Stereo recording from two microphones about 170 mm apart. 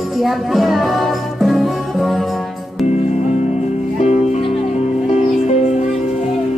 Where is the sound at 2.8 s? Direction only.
40° left (ahead or behind).